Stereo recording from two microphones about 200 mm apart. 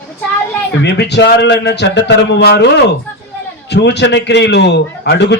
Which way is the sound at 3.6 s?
60° left (ahead or behind).